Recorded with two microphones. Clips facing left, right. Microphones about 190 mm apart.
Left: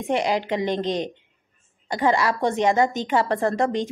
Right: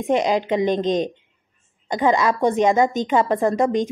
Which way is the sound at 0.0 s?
20° right (ahead or behind).